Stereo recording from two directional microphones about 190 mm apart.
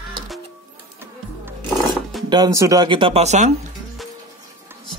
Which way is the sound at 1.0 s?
10° right (ahead or behind).